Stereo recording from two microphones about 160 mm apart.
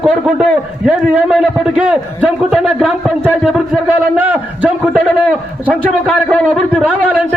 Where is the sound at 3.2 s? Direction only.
10° right (ahead or behind).